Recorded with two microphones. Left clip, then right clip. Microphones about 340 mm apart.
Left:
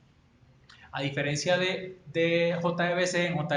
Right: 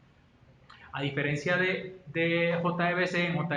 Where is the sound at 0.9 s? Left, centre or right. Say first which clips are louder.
Left 1 dB; left.